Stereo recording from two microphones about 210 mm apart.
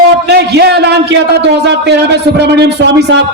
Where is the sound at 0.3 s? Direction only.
50° right (ahead or behind).